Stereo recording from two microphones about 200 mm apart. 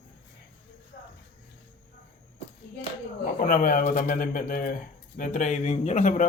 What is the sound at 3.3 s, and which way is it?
Speech, 45° left (ahead or behind).